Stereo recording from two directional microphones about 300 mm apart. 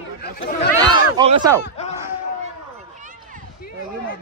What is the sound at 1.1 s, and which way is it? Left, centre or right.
Speech, centre.